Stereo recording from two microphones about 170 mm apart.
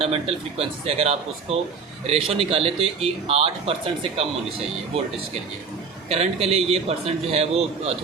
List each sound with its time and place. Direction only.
0.0 s speech: 35° right (ahead or behind)
6.1 s speech: 35° right (ahead or behind)